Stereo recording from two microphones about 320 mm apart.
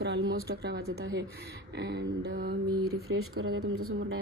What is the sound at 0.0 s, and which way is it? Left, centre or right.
Speech, right.